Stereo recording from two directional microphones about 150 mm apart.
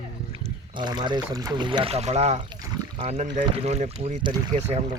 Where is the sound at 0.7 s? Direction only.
30° right (ahead or behind); by 2.4 s 45° right (ahead or behind).